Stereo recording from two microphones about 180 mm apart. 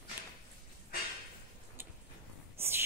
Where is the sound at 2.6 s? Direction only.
15° right (ahead or behind).